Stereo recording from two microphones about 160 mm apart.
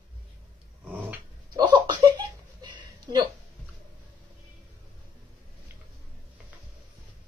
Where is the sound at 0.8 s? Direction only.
10° right (ahead or behind).